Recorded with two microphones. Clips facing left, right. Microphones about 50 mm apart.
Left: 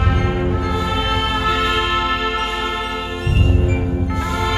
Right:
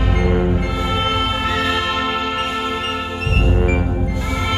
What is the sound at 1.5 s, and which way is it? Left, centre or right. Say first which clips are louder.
Music: left 1 dB; centre.